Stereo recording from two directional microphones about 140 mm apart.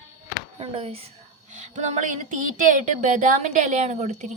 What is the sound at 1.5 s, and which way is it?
Speech, 60° right (ahead or behind).